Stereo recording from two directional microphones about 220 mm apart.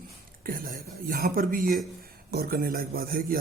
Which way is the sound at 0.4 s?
40° right (ahead or behind).